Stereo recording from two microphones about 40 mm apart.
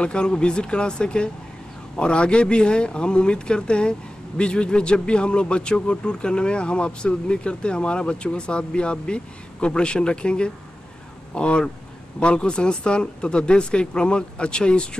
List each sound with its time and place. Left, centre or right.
0.0 s a man's voice: left